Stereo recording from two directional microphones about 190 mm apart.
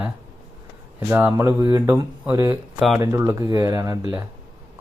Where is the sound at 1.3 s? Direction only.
15° right (ahead or behind).